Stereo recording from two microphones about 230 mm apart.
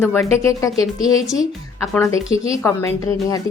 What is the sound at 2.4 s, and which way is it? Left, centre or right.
Speech, centre.